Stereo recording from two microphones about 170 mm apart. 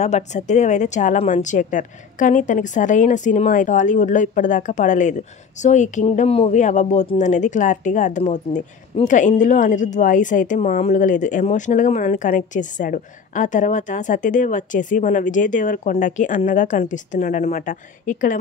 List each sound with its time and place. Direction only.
0.0 s speech: 45° left (ahead or behind)